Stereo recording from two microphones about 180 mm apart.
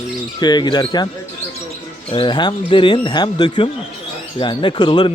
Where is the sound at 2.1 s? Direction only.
25° left (ahead or behind).